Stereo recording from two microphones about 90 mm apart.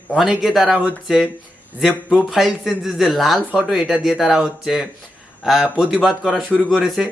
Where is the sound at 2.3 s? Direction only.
5° right (ahead or behind).